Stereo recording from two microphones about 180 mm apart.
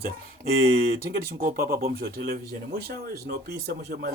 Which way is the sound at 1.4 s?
55° right (ahead or behind).